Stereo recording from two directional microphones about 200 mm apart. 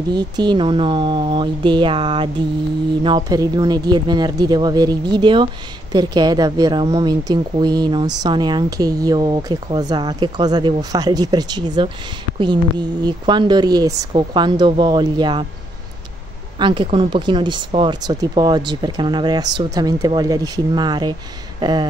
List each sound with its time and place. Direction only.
0.1 s speech: 20° right (ahead or behind)
16.5 s speech: 25° right (ahead or behind)